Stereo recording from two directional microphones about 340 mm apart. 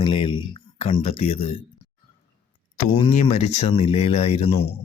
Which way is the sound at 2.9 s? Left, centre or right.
Centre.